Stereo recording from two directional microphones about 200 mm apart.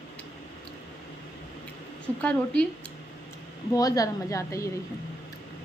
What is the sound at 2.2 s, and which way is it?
Speech, 5° left (ahead or behind).